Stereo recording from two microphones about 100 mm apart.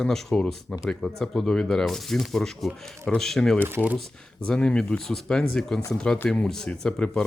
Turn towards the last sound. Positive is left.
turn(degrees=5)  # may be behind; listen again after turning